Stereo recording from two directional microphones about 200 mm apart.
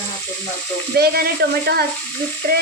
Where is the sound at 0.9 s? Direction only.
50° right (ahead or behind).